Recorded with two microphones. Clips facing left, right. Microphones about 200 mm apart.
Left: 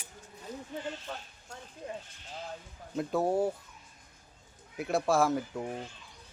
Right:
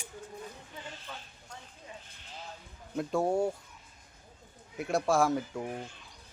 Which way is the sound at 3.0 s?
Centre (ahead or behind).